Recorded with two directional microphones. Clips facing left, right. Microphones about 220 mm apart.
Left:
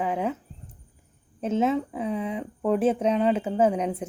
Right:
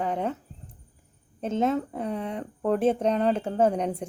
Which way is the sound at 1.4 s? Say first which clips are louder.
Left 1 dB; 5° left (ahead or behind).